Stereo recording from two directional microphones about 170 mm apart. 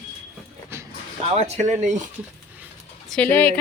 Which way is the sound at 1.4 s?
40° right (ahead or behind).